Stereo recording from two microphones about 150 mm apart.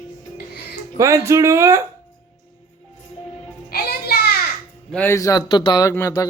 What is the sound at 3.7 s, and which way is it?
Music, 90° left.